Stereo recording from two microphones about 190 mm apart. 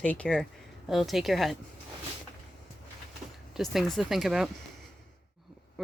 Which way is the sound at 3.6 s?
Centre (ahead or behind).